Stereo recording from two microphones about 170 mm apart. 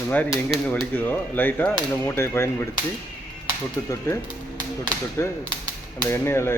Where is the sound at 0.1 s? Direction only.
10° left (ahead or behind).